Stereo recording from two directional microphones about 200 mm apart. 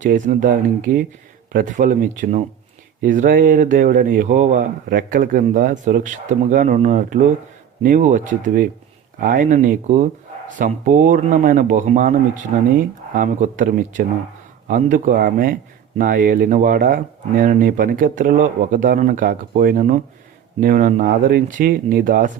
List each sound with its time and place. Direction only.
0.0 s speech: 40° right (ahead or behind)